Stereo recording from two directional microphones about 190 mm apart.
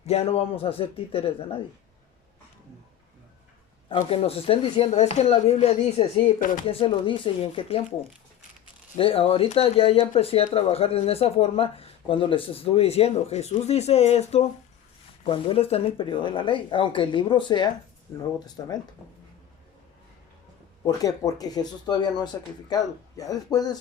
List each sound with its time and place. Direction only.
0.0 s speech: 35° left (ahead or behind)
3.8 s speech: 30° left (ahead or behind)
20.8 s speech: 20° left (ahead or behind)